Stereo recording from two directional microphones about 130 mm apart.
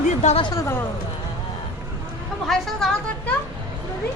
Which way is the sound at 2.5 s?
5° left (ahead or behind).